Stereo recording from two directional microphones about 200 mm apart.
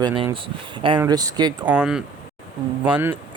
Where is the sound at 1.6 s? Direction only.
5° right (ahead or behind).